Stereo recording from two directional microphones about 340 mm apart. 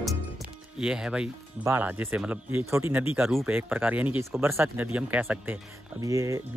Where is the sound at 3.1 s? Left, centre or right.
Centre.